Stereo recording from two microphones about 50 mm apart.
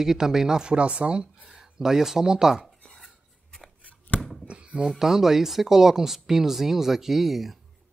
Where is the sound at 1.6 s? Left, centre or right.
Centre.